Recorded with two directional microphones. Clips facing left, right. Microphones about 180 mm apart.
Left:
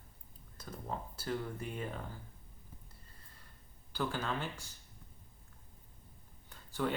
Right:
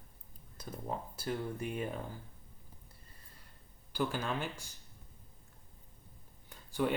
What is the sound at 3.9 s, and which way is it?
Speech, 15° right (ahead or behind).